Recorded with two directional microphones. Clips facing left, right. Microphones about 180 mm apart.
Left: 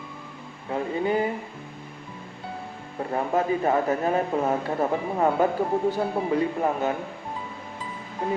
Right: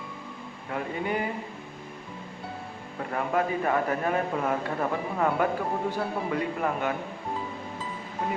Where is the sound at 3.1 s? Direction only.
25° left (ahead or behind).